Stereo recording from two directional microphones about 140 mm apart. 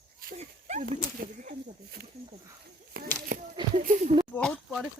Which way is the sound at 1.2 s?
90° right.